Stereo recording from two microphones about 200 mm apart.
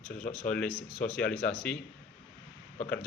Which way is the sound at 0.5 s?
5° left (ahead or behind).